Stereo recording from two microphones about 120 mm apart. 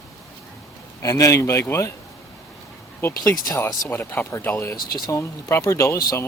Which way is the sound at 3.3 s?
30° left (ahead or behind).